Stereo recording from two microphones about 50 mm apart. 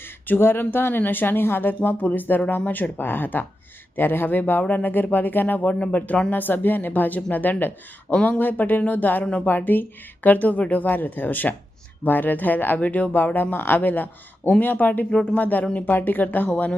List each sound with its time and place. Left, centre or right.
0.3 s a man's voice: left
6.3 s speech: left